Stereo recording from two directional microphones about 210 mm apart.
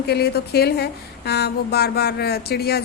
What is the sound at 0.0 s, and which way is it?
A woman's voice, 50° left (ahead or behind).